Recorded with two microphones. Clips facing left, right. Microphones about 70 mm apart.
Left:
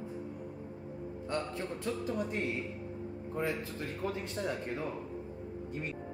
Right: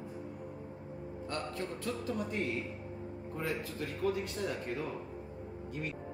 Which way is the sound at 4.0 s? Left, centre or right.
Left.